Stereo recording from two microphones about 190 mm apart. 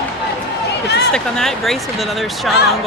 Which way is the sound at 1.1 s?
Centre (ahead or behind).